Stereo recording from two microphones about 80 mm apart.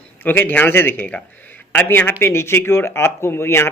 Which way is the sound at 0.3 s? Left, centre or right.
Left.